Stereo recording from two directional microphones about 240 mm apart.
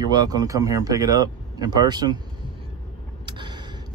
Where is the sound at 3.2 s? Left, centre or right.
Centre.